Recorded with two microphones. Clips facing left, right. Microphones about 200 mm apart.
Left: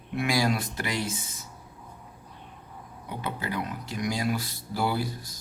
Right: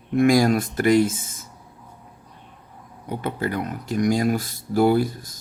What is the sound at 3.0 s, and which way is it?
Speech, 50° right (ahead or behind).